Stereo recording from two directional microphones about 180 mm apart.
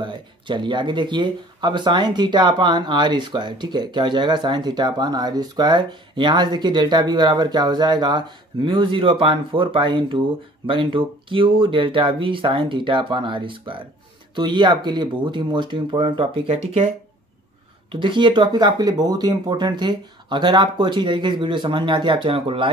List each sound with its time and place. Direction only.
0.0 s speech: 25° right (ahead or behind)
17.9 s speech: 25° right (ahead or behind)